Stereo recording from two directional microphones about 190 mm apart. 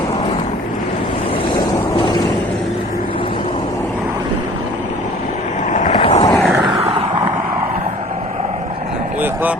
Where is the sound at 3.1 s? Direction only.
25° left (ahead or behind).